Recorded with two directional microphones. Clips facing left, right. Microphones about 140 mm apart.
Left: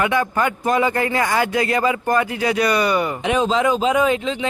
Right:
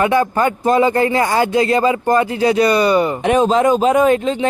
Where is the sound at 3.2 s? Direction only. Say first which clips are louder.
Right 4 dB; 50° right (ahead or behind).